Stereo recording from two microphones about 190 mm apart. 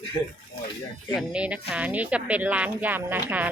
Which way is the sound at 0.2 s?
20° left (ahead or behind).